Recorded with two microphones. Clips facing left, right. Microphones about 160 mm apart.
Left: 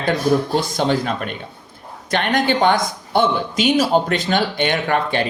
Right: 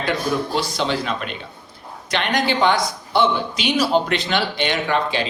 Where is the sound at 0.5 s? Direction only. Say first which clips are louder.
Left 3 dB; 50° left (ahead or behind).